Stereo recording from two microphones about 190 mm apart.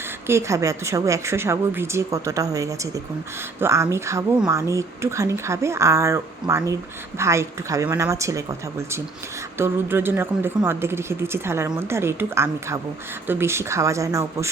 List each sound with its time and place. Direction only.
0.3 s a woman's voice: 15° right (ahead or behind)